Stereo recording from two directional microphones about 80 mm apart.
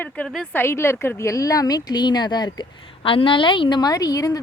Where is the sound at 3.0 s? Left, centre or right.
Left.